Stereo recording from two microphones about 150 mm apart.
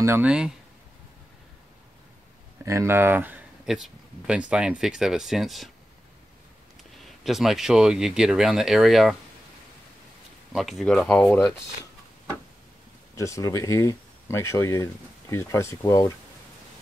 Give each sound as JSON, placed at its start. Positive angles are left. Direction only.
{"t": 0.0, "sound": "speech", "side_deg": -10}
{"t": 2.6, "sound": "speech", "side_deg": -20}
{"t": 7.0, "sound": "speech", "side_deg": 0}
{"t": 10.5, "sound": "speech", "side_deg": 0}
{"t": 13.1, "sound": "speech", "side_deg": 20}